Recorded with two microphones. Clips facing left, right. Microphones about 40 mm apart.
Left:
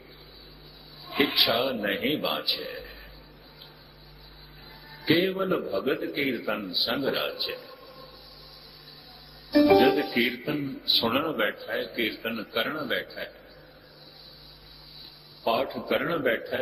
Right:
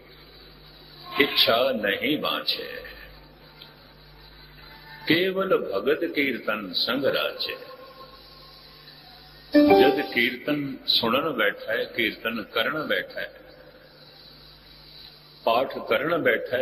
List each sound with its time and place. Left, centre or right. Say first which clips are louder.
1.1 s a man's voice: right 3 dB; centre
2.7 s burping: right 2 dB; centre
4.9 s a man's voice: right 1 dB; centre
6.7 s speech: right 2 dB; centre
6.9 s a man's voice: right 5 dB; centre
7.3 s a man's voice: right 1 dB; right
9.5 s a man's voice: right 3 dB; centre
15.4 s a man's voice: right 3 dB; centre